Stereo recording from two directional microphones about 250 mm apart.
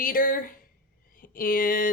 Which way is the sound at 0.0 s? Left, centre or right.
Left.